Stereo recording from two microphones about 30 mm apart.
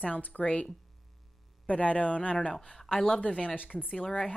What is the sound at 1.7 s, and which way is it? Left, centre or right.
A woman's voice, left.